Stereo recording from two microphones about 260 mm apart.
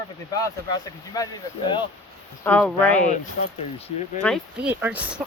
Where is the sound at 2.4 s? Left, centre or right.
Centre.